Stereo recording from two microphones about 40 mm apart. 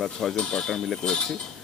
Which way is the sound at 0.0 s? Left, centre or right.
Centre.